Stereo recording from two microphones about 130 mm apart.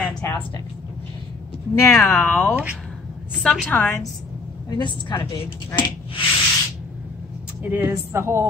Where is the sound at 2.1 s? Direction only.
5° left (ahead or behind).